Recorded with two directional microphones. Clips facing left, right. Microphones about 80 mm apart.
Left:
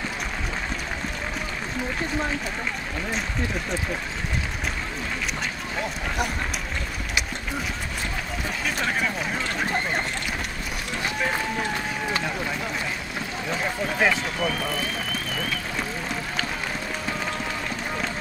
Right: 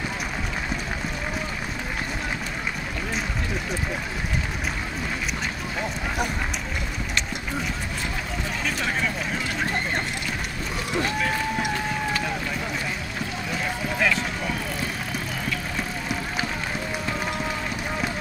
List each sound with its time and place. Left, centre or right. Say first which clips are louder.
8.6 s speech: left 1 dB; centre
13.9 s speech: left 1 dB; left